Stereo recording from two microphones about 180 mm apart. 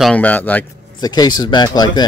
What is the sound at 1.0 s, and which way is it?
Speech, 20° left (ahead or behind).